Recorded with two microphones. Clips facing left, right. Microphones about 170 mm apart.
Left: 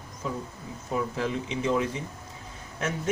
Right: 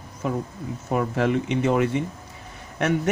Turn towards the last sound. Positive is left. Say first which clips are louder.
# right 8 dB
turn(degrees=-70)  # may be behind; listen again after turning